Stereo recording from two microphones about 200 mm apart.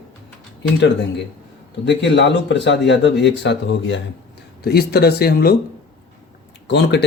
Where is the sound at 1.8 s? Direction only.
60° left (ahead or behind).